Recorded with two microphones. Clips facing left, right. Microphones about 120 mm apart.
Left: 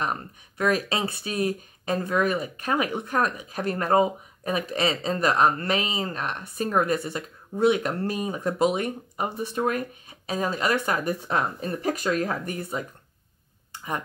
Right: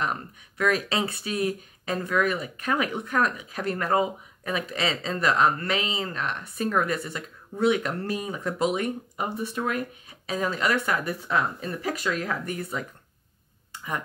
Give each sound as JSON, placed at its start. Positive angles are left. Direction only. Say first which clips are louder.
{"t": 0.6, "sound": "speech", "louder": "left 1 dB", "side_deg": 40}
{"t": 3.3, "sound": "speech", "louder": "left 1 dB", "side_deg": 35}
{"t": 7.8, "sound": "speech", "louder": "left 2 dB", "side_deg": 35}
{"t": 12.3, "sound": "speech", "louder": "left 1 dB", "side_deg": 35}